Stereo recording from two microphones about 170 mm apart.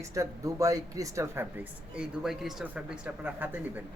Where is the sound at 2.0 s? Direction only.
Centre (ahead or behind).